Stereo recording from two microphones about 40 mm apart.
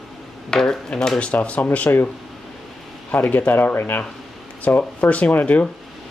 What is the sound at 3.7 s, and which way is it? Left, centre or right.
Speech, left.